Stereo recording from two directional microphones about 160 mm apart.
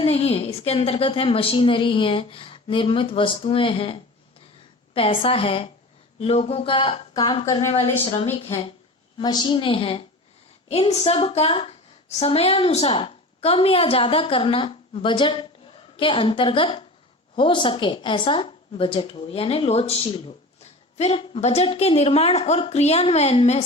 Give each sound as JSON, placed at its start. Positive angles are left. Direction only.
{"t": 0.0, "sound": "a woman's voice", "side_deg": 40}
{"t": 9.1, "sound": "a woman's voice", "side_deg": 25}